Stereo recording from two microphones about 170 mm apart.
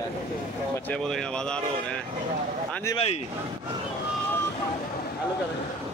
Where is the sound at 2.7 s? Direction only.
15° left (ahead or behind).